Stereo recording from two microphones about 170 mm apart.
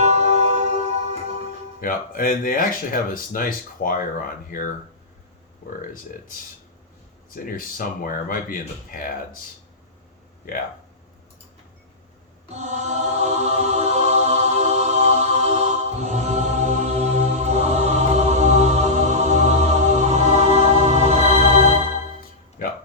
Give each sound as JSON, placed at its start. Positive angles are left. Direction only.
{"t": 0.0, "sound": "music", "side_deg": -40}
{"t": 1.8, "sound": "speech", "side_deg": 55}
{"t": 7.3, "sound": "speech", "side_deg": 55}
{"t": 12.5, "sound": "music", "side_deg": -40}
{"t": 22.2, "sound": "music", "side_deg": 55}